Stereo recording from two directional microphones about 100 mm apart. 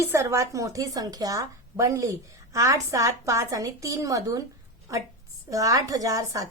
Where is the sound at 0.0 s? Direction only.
25° right (ahead or behind).